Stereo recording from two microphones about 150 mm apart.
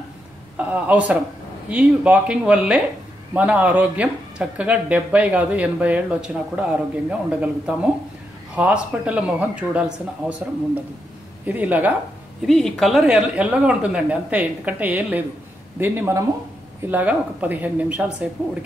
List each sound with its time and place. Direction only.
0.6 s speech: 10° right (ahead or behind)
11.4 s speech: 10° right (ahead or behind)
12.4 s speech: centre (ahead or behind)